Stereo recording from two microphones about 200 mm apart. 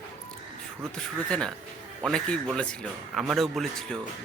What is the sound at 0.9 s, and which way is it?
Speech, 5° left (ahead or behind).